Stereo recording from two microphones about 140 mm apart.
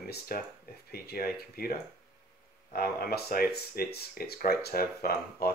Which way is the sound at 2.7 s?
90° left.